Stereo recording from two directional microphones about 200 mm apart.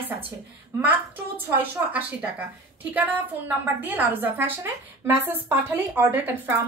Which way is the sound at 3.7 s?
10° right (ahead or behind).